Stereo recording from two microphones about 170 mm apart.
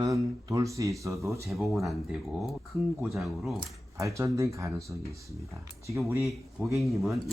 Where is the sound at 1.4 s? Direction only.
Centre (ahead or behind).